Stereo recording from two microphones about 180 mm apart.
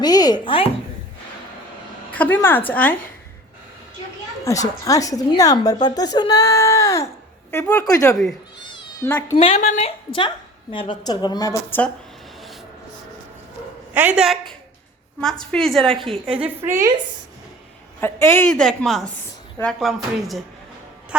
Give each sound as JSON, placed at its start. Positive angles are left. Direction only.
{"t": 0.0, "sound": "a woman's voice", "side_deg": 20}
{"t": 2.1, "sound": "a woman's voice", "side_deg": 10}
{"t": 4.4, "sound": "a woman's voice", "side_deg": 20}
{"t": 8.6, "sound": "cat", "side_deg": 25}
{"t": 9.3, "sound": "a woman's voice", "side_deg": 30}
{"t": 9.6, "sound": "a woman's voice", "side_deg": 40}
{"t": 13.9, "sound": "a woman's voice", "side_deg": -10}
{"t": 16.0, "sound": "a woman's voice", "side_deg": -30}
{"t": 16.4, "sound": "a woman's voice", "side_deg": -15}
{"t": 18.0, "sound": "a woman's voice", "side_deg": 10}